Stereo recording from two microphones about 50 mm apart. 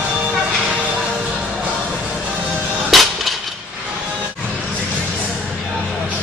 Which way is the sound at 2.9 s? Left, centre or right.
Centre.